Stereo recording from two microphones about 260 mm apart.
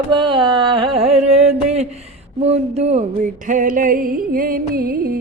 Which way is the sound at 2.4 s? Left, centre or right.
Right.